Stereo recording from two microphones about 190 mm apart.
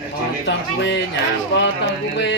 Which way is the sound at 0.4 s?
70° left (ahead or behind).